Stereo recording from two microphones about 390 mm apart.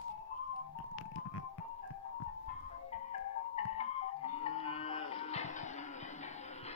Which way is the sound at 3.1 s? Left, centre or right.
Centre.